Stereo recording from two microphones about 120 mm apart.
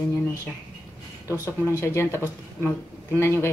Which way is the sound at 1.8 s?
20° left (ahead or behind).